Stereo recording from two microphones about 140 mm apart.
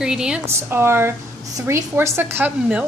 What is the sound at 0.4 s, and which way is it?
A woman's voice, 20° right (ahead or behind).